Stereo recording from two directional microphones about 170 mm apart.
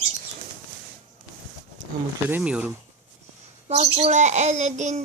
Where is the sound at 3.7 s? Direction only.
40° right (ahead or behind).